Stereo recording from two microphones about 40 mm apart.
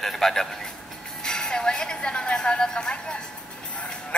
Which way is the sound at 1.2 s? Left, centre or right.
Centre.